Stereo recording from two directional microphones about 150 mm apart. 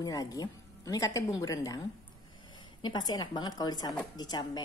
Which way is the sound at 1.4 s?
25° left (ahead or behind).